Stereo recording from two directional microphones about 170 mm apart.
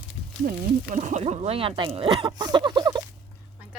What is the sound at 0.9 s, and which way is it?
Speech, 40° right (ahead or behind).